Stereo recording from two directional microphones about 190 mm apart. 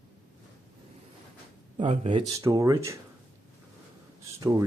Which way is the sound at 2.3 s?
15° right (ahead or behind).